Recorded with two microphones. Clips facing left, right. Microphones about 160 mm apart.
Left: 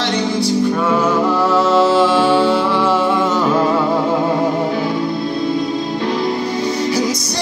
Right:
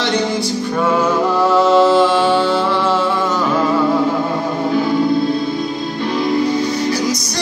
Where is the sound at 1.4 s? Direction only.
5° left (ahead or behind).